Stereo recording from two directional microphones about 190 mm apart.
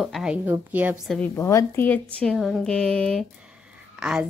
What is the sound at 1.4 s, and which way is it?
Speech, 15° left (ahead or behind).